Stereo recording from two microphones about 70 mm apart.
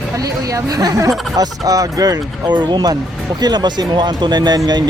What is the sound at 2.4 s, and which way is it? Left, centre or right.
Speech, right.